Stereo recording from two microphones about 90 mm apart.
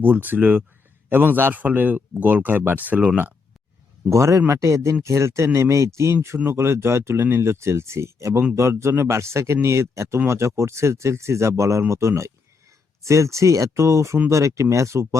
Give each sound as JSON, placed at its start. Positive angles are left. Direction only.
{"t": 0.0, "sound": "speech", "side_deg": -20}
{"t": 4.1, "sound": "speech", "side_deg": -35}